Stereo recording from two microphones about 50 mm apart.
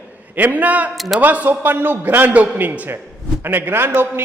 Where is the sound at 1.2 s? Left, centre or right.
Right.